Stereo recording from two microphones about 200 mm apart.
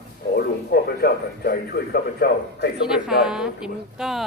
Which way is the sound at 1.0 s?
50° left (ahead or behind).